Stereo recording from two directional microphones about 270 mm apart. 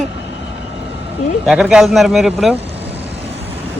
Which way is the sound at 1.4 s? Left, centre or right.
Centre.